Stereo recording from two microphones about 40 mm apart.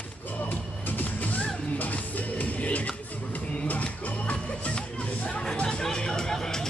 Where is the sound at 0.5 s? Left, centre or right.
Left.